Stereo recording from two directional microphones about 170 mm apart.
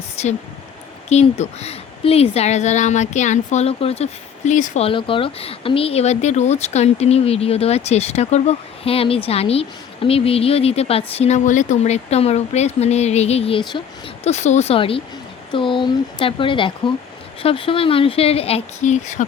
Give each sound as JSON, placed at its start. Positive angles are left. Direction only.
{"t": 0.2, "sound": "speech", "side_deg": 40}
{"t": 4.9, "sound": "speech", "side_deg": 30}
{"t": 14.3, "sound": "speech", "side_deg": 40}